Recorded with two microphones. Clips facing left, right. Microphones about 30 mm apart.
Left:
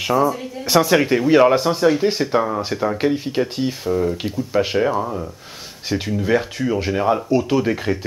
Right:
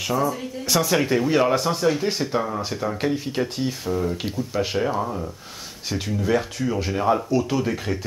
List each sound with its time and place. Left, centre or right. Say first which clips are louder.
0.0 s speech: left 5 dB; centre